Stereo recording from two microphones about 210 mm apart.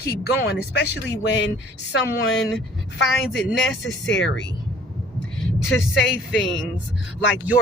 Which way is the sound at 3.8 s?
60° left (ahead or behind).